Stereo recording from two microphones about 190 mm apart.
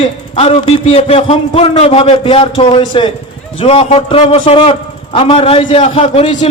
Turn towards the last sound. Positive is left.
turn(degrees=30)  # may be behind; listen again after turning